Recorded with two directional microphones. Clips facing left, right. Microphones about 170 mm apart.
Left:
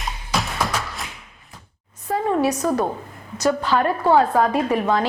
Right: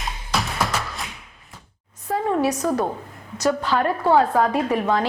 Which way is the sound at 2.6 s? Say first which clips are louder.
Left 1 dB; 25° left (ahead or behind).